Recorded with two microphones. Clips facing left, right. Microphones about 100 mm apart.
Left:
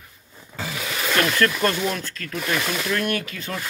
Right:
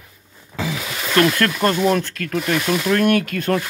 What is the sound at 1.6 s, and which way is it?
Speech, 40° right (ahead or behind).